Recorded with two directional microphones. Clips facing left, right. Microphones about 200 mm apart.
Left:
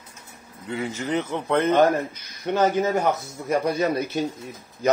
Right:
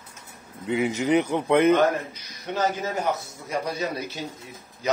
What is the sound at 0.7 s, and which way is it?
Speech, 15° right (ahead or behind).